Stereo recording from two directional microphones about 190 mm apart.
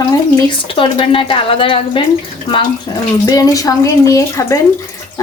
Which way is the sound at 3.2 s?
20° left (ahead or behind).